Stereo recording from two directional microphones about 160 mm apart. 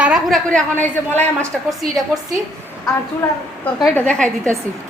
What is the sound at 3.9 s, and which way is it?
Speech, 5° left (ahead or behind).